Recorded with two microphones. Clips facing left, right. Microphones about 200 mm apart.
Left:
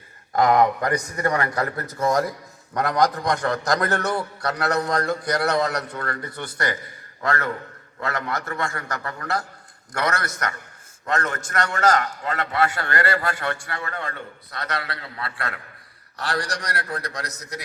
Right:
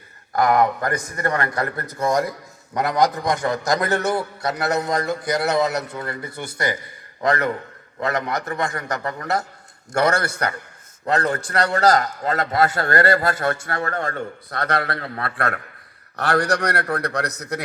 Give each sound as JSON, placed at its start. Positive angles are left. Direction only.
{"t": 0.3, "sound": "a man's voice", "side_deg": 20}
{"t": 3.0, "sound": "a man's voice", "side_deg": -25}
{"t": 3.4, "sound": "a man's voice", "side_deg": -5}
{"t": 3.9, "sound": "a man's voice", "side_deg": -25}
{"t": 4.9, "sound": "a man's voice", "side_deg": -5}
{"t": 5.4, "sound": "a man's voice", "side_deg": -20}
{"t": 5.6, "sound": "a man's voice", "side_deg": -5}